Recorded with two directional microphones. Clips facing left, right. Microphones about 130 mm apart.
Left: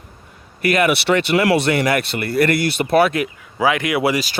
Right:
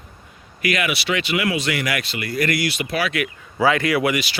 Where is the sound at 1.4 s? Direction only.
70° left (ahead or behind).